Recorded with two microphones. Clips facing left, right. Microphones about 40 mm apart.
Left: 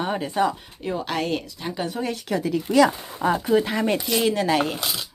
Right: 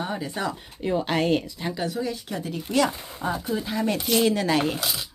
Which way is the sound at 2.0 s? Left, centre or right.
Left.